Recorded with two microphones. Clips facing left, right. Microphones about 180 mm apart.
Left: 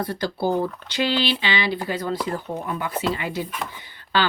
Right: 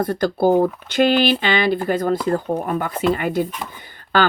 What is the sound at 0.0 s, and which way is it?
Speech, 50° right (ahead or behind).